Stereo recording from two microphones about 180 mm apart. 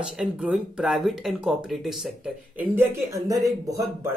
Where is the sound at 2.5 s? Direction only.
15° right (ahead or behind).